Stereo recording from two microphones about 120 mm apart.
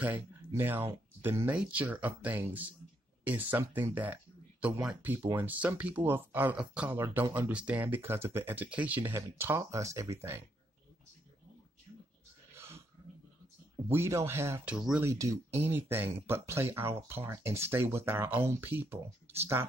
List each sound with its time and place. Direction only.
0.0 s speech: 15° right (ahead or behind)
6.9 s speech: 20° right (ahead or behind)
12.5 s a sound: 20° right (ahead or behind)
13.8 s speech: 20° right (ahead or behind)
14.7 s speech: 5° right (ahead or behind)
15.0 s speech: 25° right (ahead or behind)